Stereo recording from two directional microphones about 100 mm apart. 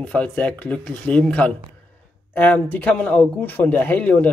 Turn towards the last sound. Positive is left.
turn(degrees=15)  # may be behind; listen again after turning